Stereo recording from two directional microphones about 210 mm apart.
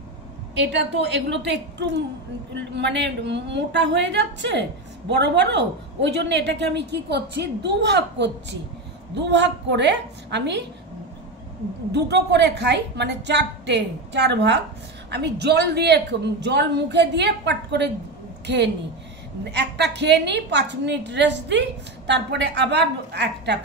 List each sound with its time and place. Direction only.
0.6 s a woman's voice: 55° right (ahead or behind)
11.9 s a woman's voice: 50° right (ahead or behind)
19.5 s a woman's voice: 55° right (ahead or behind)